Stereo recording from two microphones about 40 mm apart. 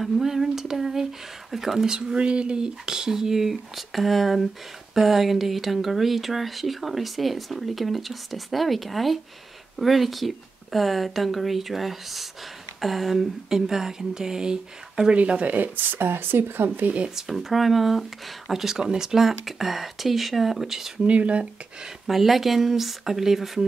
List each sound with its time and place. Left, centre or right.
0.0 s speech: centre
2.1 s speech: right
15.1 s speech: right
15.5 s speech: right
17.3 s speech: centre
21.1 s speech: right
21.8 s speech: centre